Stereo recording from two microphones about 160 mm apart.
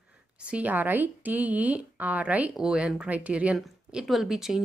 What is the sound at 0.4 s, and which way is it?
Speech, 10° right (ahead or behind).